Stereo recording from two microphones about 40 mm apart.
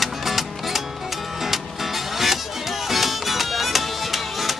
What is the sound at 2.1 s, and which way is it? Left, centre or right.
Music, centre.